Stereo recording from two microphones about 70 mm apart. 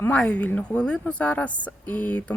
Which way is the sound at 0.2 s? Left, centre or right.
Left.